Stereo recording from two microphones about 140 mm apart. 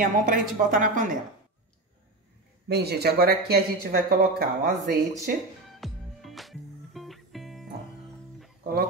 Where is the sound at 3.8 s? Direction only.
90° right.